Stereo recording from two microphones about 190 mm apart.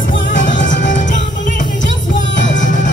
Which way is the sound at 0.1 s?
75° left (ahead or behind).